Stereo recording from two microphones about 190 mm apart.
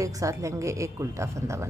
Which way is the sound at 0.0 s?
15° right (ahead or behind).